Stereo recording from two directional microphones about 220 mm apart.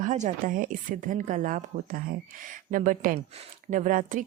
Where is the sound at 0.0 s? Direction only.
35° right (ahead or behind).